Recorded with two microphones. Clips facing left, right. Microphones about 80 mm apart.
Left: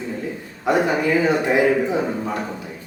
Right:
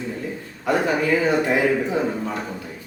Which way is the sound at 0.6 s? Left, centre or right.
Centre.